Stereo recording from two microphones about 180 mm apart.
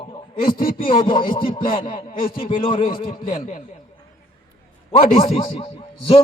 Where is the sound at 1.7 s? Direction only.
50° left (ahead or behind).